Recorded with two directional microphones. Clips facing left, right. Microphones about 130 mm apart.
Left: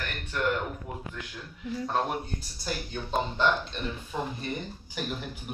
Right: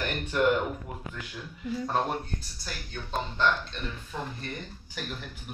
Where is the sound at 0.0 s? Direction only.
15° right (ahead or behind).